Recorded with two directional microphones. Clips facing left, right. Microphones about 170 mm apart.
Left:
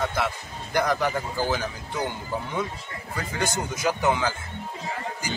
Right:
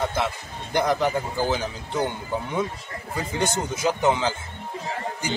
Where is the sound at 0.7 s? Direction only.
20° right (ahead or behind).